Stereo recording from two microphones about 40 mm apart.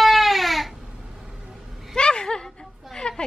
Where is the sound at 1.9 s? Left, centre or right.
Left.